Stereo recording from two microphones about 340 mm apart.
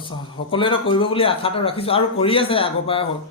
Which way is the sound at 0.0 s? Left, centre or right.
Centre.